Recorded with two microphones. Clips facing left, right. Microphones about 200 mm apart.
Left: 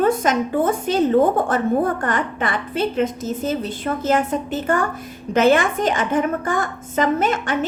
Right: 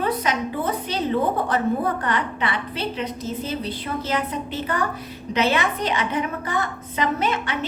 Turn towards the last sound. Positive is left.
turn(degrees=45)  # may be behind; listen again after turning